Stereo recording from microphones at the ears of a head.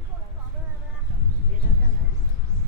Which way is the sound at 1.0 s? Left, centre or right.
Right.